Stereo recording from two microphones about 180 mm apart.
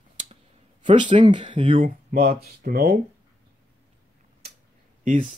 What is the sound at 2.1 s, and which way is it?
Speech, 55° right (ahead or behind).